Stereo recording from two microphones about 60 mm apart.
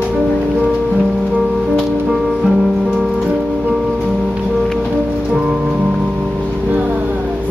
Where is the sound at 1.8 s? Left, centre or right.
Centre.